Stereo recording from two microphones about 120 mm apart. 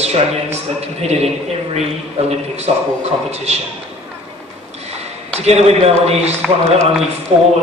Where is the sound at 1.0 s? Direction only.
60° right (ahead or behind).